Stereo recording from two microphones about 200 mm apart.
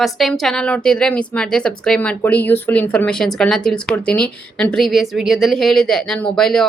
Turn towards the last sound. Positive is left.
turn(degrees=5)  # may be behind; listen again after turning